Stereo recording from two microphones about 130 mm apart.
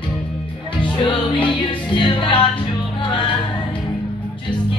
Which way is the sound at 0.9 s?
40° left (ahead or behind).